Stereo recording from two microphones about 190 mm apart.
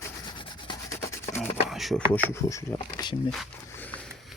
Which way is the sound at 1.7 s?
Centre (ahead or behind).